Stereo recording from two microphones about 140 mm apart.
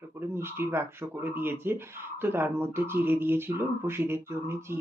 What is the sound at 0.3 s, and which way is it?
Speech, 15° right (ahead or behind).